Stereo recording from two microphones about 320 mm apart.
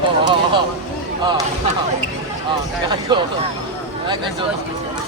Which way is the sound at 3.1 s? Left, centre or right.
Centre.